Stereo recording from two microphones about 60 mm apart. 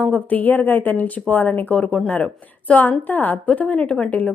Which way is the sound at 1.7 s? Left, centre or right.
Centre.